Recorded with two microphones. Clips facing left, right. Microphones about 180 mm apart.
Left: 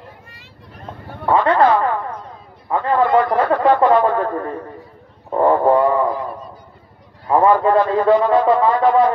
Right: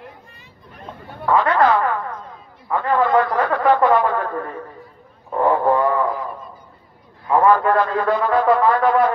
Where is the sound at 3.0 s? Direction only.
10° left (ahead or behind).